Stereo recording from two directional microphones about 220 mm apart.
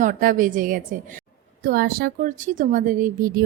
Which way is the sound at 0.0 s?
40° right (ahead or behind).